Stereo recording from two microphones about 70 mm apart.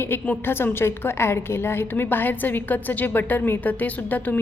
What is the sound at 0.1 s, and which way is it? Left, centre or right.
A woman's voice, left.